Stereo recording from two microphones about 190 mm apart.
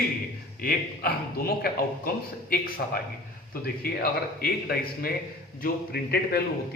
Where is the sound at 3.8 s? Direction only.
50° left (ahead or behind).